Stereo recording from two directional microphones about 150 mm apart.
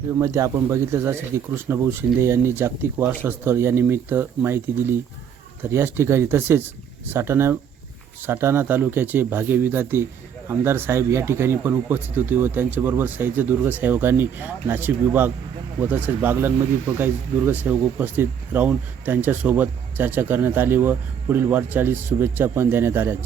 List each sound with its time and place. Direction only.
0.1 s speech: 20° right (ahead or behind)